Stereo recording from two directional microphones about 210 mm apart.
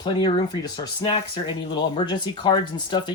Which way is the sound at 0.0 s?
20° left (ahead or behind).